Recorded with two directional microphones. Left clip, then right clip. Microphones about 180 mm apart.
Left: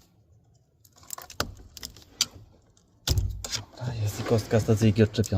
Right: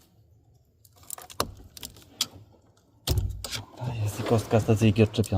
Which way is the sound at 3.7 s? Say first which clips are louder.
Even; centre (ahead or behind).